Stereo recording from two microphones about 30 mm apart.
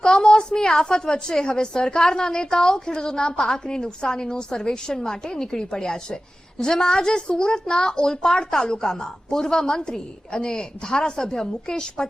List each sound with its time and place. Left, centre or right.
0.0 s a woman's voice: left